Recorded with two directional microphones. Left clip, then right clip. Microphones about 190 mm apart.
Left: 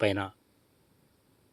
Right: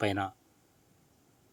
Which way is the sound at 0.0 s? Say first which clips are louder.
Left 3 dB; 10° left (ahead or behind).